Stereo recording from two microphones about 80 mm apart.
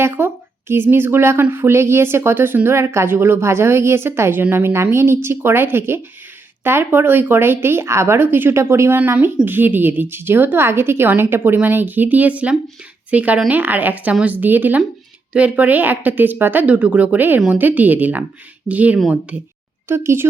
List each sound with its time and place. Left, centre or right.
0.2 s speech: right
19.9 s speech: right